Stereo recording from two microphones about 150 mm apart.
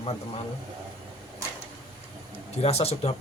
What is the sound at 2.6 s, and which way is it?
Speech, 45° left (ahead or behind).